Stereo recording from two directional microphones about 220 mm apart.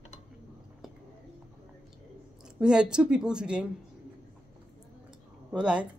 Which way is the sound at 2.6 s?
5° right (ahead or behind).